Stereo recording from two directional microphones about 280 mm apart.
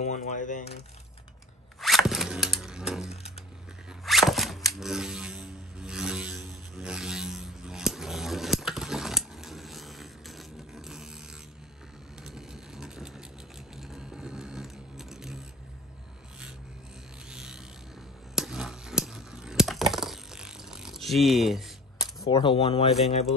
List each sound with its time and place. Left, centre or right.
0.0 s speech: left
1.8 s zipper: centre
4.7 s mechanisms: centre
12.3 s vehicle: centre
13.7 s a sound: centre
17.3 s a sound: centre
22.0 s speech: centre